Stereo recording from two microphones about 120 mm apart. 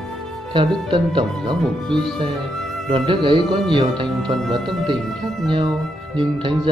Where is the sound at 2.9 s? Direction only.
40° right (ahead or behind).